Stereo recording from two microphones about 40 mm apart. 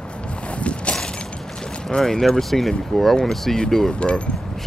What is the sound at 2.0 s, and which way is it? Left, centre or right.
Speech, centre.